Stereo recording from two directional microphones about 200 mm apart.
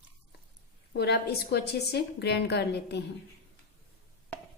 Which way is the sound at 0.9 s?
55° left (ahead or behind).